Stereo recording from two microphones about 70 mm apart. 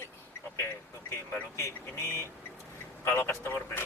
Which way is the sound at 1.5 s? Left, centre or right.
Left.